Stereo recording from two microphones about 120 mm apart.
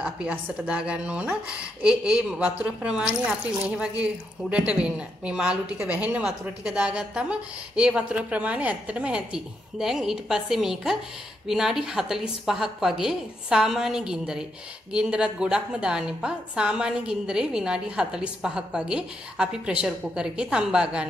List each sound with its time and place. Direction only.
0.0 s a woman's voice: 10° right (ahead or behind)